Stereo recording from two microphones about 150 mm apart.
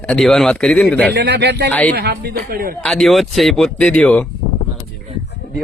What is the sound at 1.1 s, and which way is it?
Speech, 90° right.